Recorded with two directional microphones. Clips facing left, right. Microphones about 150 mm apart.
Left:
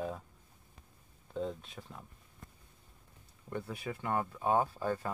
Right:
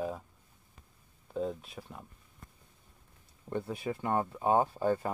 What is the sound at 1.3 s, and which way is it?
Speech, 5° right (ahead or behind).